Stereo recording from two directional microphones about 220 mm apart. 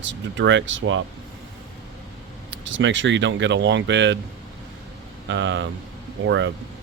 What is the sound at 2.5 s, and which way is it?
Speech, 60° right (ahead or behind).